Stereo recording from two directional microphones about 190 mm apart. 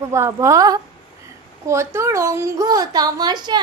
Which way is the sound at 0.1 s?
15° right (ahead or behind).